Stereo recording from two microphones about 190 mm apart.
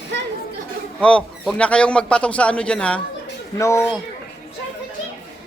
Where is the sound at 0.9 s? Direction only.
5° left (ahead or behind).